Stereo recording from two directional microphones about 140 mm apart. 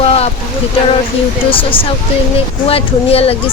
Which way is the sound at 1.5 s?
40° left (ahead or behind).